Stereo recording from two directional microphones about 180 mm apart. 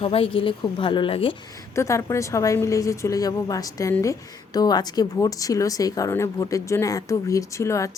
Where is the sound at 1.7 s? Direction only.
15° left (ahead or behind).